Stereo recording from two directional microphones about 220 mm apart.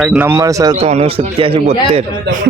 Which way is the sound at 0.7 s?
30° right (ahead or behind).